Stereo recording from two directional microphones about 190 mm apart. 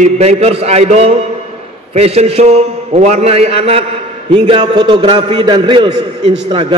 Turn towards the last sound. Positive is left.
turn(degrees=-25)  # may be behind; listen again after turning